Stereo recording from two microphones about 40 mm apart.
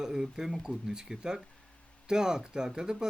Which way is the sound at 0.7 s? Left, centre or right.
Centre.